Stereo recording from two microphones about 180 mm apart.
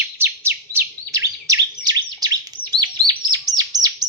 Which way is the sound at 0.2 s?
15° right (ahead or behind).